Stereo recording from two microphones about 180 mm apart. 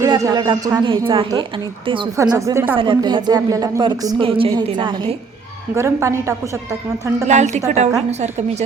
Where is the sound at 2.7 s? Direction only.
25° right (ahead or behind).